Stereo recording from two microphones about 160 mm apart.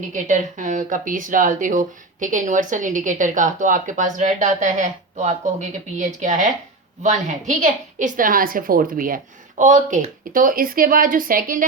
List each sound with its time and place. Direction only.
0.1 s a woman's voice: 50° right (ahead or behind)